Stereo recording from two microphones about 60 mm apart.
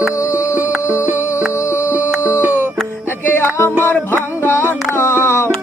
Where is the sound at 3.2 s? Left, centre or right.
Left.